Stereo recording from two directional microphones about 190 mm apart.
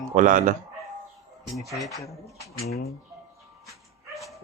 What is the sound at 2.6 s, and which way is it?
Speech, 35° left (ahead or behind).